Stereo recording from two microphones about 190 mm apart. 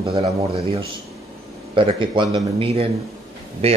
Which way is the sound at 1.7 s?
25° right (ahead or behind).